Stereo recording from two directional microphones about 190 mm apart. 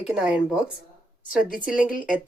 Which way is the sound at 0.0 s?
5° right (ahead or behind).